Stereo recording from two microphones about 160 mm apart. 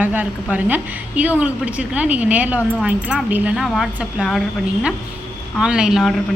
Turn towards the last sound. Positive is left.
turn(degrees=-5)  # may be behind; listen again after turning